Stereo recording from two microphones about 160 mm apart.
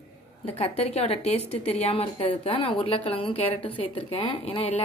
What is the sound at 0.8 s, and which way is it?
Speech, 40° left (ahead or behind).